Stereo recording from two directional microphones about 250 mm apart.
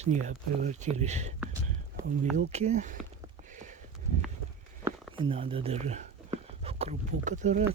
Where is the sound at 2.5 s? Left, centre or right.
Right.